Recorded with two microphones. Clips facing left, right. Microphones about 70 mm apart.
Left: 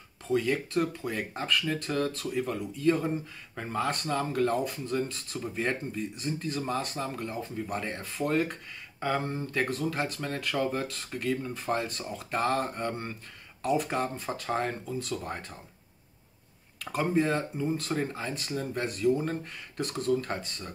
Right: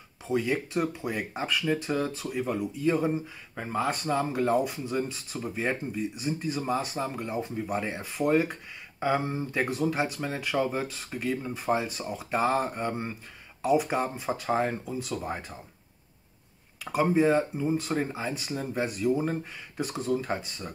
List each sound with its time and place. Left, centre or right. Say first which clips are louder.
0.3 s speech: even; centre
16.8 s speech: right 4 dB; centre